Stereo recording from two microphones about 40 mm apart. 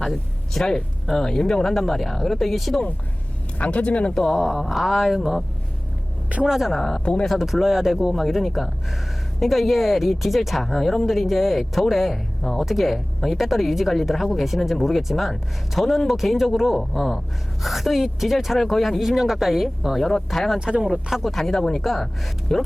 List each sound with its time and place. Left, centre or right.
0.0 s speech: centre
3.6 s speech: left
4.3 s speech: centre
6.4 s speech: centre
6.7 s speech: centre
7.0 s speech: left
7.3 s speech: centre
20.0 s speech: centre
20.6 s speech: right
20.8 s speech: centre
21.2 s speech: centre
21.8 s speech: centre